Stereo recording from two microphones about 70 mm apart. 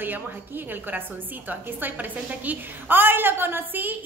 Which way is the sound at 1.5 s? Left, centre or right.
Right.